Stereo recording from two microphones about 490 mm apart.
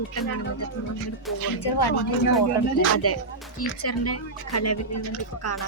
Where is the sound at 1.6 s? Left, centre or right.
Left.